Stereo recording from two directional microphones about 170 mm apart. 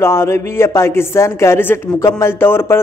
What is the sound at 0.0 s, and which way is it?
A man's voice, 15° left (ahead or behind).